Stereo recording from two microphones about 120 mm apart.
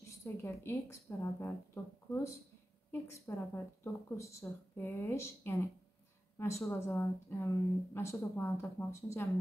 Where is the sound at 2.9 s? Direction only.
20° left (ahead or behind).